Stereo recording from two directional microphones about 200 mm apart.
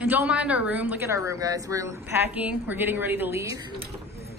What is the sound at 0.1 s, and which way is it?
Speech, 10° right (ahead or behind).